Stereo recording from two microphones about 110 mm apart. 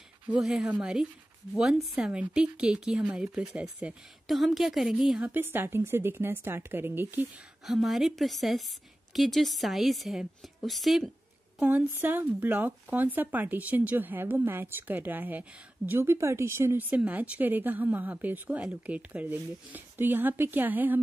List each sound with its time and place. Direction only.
0.3 s speech: 5° right (ahead or behind)
4.3 s a woman's voice: centre (ahead or behind)
5.3 s a woman's voice: 20° right (ahead or behind)
7.6 s a woman's voice: centre (ahead or behind)
11.6 s speech: 15° right (ahead or behind)
16.9 s speech: 15° right (ahead or behind)